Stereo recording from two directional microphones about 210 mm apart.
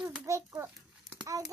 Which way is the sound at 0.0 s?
15° right (ahead or behind).